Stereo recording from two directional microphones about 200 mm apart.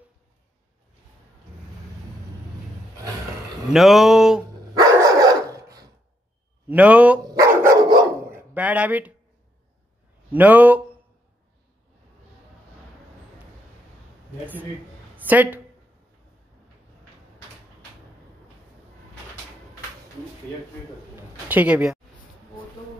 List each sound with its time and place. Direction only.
3.7 s speech: centre (ahead or behind)
4.7 s dog: 20° right (ahead or behind)
6.7 s dog: 5° right (ahead or behind)
8.5 s speech: 5° right (ahead or behind)
10.3 s speech: 10° right (ahead or behind)
15.1 s a woman's voice: 10° right (ahead or behind)
21.5 s speech: 10° right (ahead or behind)